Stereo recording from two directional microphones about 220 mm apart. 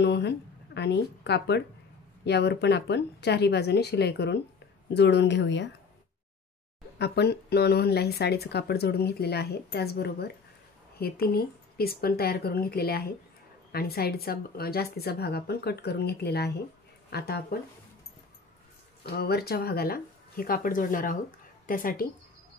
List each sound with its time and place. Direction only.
0.0 s a sound: 50° left (ahead or behind)
0.7 s speech: 50° left (ahead or behind)
7.0 s speech: 50° left (ahead or behind)
19.0 s a woman's voice: 45° left (ahead or behind)